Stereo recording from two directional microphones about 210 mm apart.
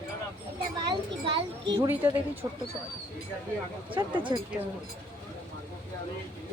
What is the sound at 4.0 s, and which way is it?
Speech, 20° right (ahead or behind).